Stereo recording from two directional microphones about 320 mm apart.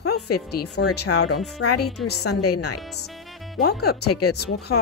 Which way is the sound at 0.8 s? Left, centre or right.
Left.